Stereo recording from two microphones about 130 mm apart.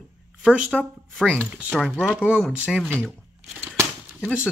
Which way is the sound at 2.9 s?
10° left (ahead or behind).